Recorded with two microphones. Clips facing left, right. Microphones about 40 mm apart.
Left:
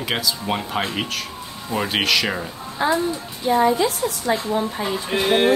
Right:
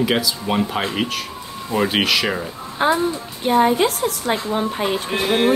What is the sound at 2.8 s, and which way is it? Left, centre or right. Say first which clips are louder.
A woman's voice: right 2 dB; right.